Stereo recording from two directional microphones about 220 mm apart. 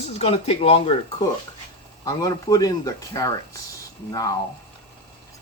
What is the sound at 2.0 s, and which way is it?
Speech, 15° left (ahead or behind).